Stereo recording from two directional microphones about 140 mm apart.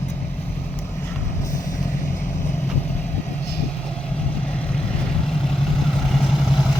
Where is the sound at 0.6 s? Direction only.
15° left (ahead or behind).